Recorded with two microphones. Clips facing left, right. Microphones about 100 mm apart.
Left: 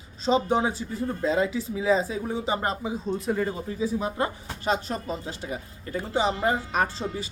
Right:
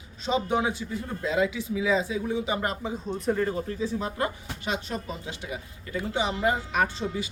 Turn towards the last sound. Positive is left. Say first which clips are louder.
# even
turn(degrees=35)  # may be behind; listen again after turning